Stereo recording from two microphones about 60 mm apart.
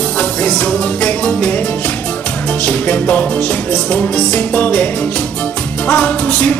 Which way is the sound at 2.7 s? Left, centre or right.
Left.